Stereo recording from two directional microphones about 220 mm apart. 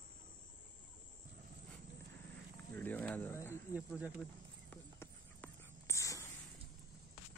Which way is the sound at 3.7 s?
5° right (ahead or behind).